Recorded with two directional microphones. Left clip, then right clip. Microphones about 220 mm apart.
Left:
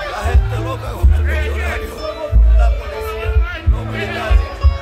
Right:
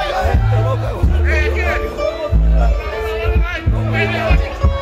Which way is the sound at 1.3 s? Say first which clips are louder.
Right 5 dB; 15° left (ahead or behind).